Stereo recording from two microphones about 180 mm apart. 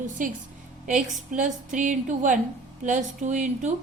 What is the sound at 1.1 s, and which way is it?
A woman's voice, 45° right (ahead or behind).